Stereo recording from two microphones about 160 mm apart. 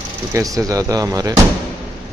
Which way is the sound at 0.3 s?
20° right (ahead or behind).